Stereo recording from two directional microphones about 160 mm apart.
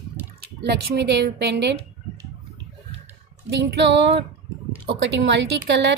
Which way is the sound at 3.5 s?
90° right.